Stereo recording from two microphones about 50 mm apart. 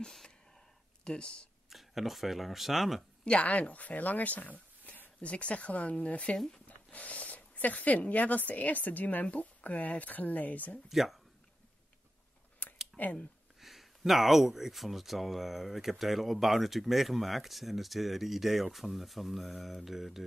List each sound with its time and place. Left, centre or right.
0.0 s a sound: centre
1.0 s speech: centre
1.7 s speech: centre
3.3 s speech: left
6.3 s speech: centre
6.9 s speech: left
10.9 s speech: centre
12.6 s typing: left
13.6 s speech: centre